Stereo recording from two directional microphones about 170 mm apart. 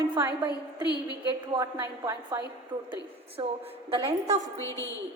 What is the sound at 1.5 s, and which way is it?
A woman's voice, 30° right (ahead or behind).